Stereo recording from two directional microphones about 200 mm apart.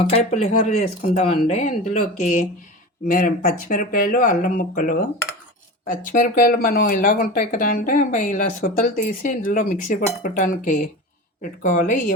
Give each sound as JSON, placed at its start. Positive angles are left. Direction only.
{"t": 0.0, "sound": "speech", "side_deg": 30}